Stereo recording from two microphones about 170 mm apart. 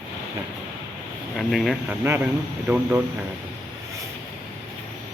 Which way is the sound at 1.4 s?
Centre (ahead or behind).